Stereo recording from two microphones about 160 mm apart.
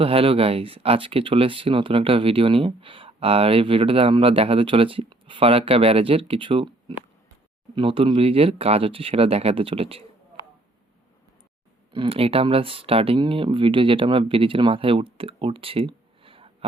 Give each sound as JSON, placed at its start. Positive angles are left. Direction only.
{"t": 0.0, "sound": "speech", "side_deg": -35}
{"t": 11.9, "sound": "speech", "side_deg": -35}